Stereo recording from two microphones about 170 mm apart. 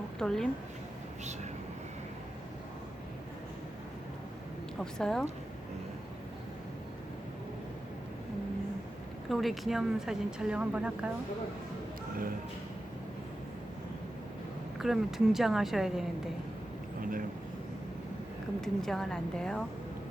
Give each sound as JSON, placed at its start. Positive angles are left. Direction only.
{"t": 0.2, "sound": "speech", "side_deg": 5}
{"t": 4.8, "sound": "speech", "side_deg": 5}
{"t": 9.3, "sound": "speech", "side_deg": 0}
{"t": 14.8, "sound": "speech", "side_deg": 0}
{"t": 17.0, "sound": "a sound", "side_deg": -55}
{"t": 18.6, "sound": "speech", "side_deg": 0}